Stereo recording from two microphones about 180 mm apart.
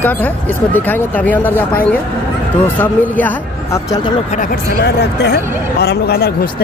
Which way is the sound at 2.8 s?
10° left (ahead or behind).